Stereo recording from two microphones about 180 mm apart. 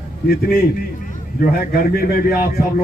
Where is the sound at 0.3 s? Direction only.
55° left (ahead or behind).